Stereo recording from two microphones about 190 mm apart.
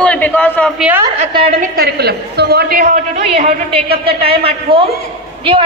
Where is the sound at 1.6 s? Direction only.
55° right (ahead or behind).